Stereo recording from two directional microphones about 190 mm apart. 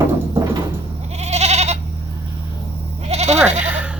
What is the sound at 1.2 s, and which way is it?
Goat, 35° right (ahead or behind).